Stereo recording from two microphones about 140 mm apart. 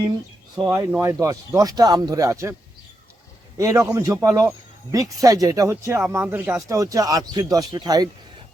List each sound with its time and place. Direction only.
0.5 s speech: 25° right (ahead or behind)
0.9 s speech: 10° right (ahead or behind)
1.2 s speech: 25° right (ahead or behind)
3.6 s speech: 20° right (ahead or behind)